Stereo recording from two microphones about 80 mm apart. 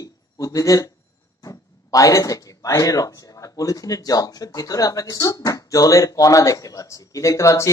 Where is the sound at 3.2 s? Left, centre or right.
Left.